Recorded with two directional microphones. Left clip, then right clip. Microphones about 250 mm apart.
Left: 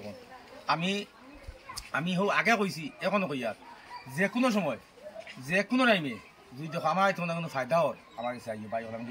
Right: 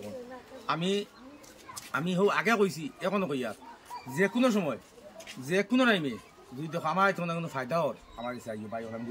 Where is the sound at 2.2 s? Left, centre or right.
Centre.